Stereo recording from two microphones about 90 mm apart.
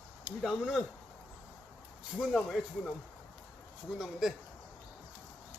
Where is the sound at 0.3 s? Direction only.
20° right (ahead or behind).